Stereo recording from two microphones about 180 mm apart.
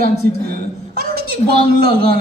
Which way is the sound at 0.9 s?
60° right (ahead or behind).